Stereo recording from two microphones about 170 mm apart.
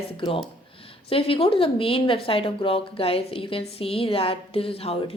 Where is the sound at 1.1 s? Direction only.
35° left (ahead or behind).